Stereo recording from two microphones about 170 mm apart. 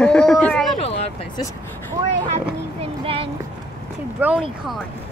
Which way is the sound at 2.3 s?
35° right (ahead or behind).